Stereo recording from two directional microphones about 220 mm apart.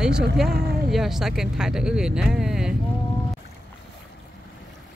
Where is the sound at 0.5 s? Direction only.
45° right (ahead or behind).